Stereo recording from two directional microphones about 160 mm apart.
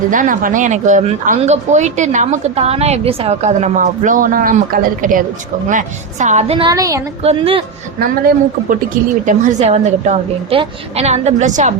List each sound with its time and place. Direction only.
0.1 s speech: 55° right (ahead or behind)
6.6 s a woman's voice: 25° right (ahead or behind)
7.2 s a woman's voice: 35° right (ahead or behind)
7.9 s speech: 70° right (ahead or behind)
9.2 s speech: 45° right (ahead or behind)